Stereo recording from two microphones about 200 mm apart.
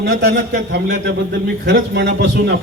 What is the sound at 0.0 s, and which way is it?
A man's voice, 60° right (ahead or behind).